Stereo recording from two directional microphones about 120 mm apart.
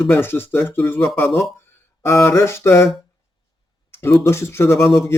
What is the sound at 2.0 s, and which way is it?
Speech, 25° left (ahead or behind).